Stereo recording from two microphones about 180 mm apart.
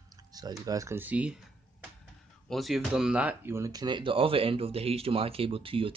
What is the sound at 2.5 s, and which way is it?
Speech, centre (ahead or behind).